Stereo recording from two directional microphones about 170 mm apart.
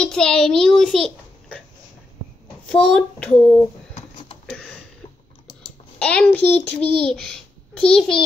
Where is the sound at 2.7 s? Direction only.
5° left (ahead or behind).